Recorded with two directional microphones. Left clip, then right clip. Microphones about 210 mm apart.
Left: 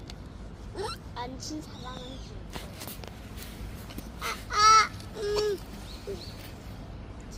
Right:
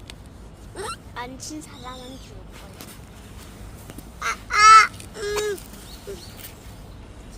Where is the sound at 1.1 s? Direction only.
10° right (ahead or behind).